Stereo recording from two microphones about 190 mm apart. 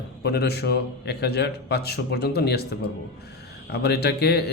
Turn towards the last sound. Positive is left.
turn(degrees=60)  # may be behind; listen again after turning